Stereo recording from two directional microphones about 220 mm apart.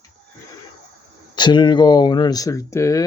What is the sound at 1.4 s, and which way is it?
Speech, 20° left (ahead or behind).